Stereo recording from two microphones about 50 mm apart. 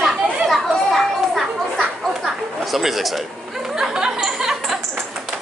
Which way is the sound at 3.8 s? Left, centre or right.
Centre.